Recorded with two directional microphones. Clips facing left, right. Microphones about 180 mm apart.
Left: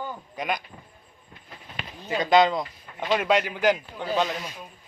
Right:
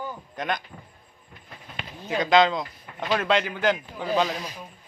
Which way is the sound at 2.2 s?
10° left (ahead or behind).